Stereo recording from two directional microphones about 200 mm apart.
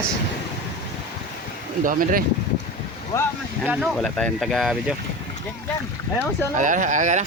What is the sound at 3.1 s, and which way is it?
Speech, 10° left (ahead or behind).